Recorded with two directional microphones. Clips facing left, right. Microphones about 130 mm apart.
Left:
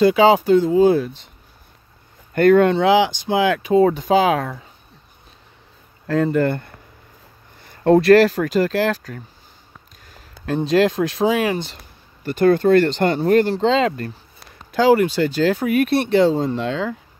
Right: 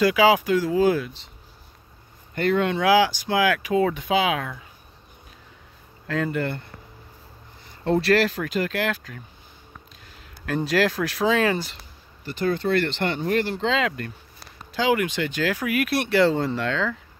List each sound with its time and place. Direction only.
0.0 s speech: 30° left (ahead or behind)
1.0 s speech: 45° left (ahead or behind)
2.3 s speech: 50° left (ahead or behind)
2.7 s speech: 25° left (ahead or behind); by 4.6 s 40° left (ahead or behind)
6.0 s speech: 35° left (ahead or behind)
7.8 s speech: 50° left (ahead or behind)
10.4 s speech: 25° left (ahead or behind)
12.3 s speech: 55° left (ahead or behind); by 16.9 s 20° left (ahead or behind)